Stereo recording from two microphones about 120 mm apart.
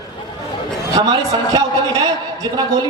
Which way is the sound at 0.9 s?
35° right (ahead or behind).